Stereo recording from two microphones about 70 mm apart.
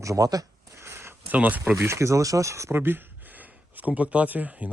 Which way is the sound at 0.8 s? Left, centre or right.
Right.